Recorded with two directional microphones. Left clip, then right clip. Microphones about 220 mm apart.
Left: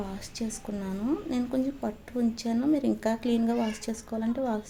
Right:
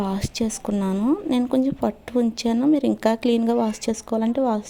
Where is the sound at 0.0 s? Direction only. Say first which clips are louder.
Right 10 dB; 40° right (ahead or behind).